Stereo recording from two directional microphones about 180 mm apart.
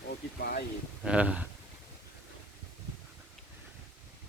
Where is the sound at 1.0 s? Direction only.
5° right (ahead or behind).